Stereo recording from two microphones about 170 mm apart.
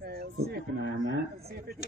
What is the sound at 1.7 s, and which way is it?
Speech, 65° right (ahead or behind).